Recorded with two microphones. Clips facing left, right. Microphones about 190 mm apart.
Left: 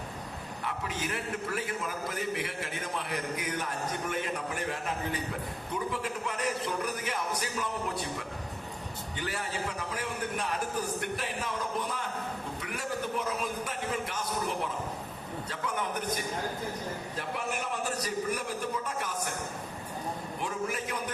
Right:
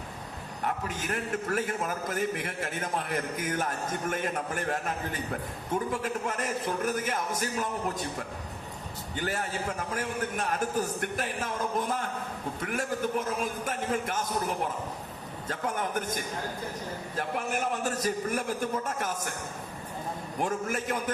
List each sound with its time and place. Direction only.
0.6 s a man's voice: 45° right (ahead or behind)
9.1 s a man's voice: 45° right (ahead or behind)
17.2 s a man's voice: 50° right (ahead or behind)
20.4 s a man's voice: 50° right (ahead or behind)